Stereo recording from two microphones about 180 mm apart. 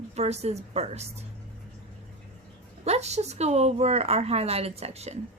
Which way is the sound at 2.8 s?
35° right (ahead or behind).